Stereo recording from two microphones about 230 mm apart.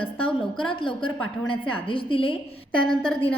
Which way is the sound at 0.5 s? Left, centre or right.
Left.